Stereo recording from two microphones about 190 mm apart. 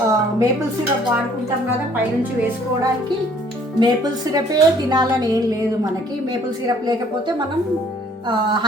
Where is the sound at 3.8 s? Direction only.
20° right (ahead or behind).